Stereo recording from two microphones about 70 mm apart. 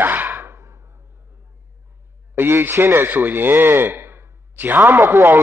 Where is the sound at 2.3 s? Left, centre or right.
Right.